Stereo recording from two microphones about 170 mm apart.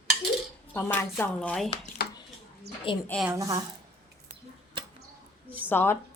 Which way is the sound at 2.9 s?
30° left (ahead or behind).